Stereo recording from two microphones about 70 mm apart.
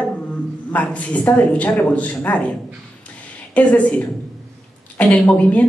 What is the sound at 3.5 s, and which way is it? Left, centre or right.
A woman's voice, centre.